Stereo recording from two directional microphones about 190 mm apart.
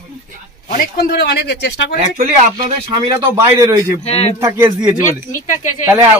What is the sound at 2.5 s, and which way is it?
A man's voice, 20° right (ahead or behind).